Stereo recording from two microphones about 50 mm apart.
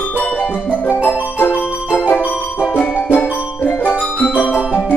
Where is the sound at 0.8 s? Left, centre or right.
Left.